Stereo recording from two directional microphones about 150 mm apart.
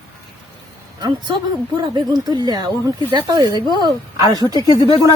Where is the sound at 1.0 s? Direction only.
25° right (ahead or behind).